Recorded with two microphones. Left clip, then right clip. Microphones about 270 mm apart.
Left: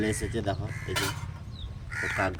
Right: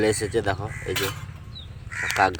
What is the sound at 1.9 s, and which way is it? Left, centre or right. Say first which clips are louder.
Crow: right 7 dB; centre.